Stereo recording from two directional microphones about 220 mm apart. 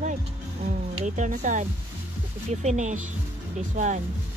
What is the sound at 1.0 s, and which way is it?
Speech, 35° right (ahead or behind).